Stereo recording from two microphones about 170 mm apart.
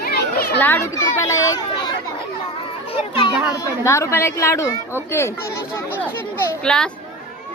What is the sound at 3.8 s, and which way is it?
Speech, 15° left (ahead or behind).